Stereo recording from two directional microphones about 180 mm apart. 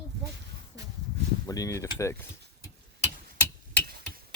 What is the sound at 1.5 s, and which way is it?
Speech, 20° left (ahead or behind).